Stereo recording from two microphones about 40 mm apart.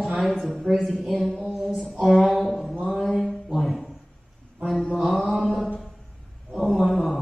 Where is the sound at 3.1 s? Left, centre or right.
Centre.